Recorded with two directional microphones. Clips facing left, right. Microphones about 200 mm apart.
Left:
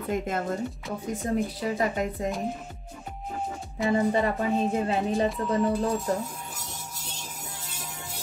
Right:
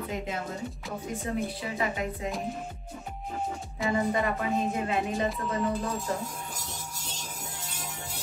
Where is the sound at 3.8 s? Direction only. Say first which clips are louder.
Left 3 dB; 30° left (ahead or behind).